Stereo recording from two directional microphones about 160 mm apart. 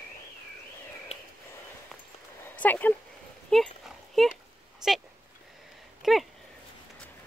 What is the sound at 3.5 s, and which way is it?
Speech, 5° left (ahead or behind).